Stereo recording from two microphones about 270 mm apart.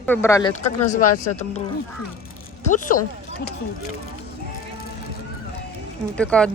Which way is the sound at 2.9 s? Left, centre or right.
Left.